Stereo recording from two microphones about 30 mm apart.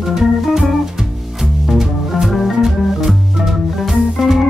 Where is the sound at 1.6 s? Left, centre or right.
Centre.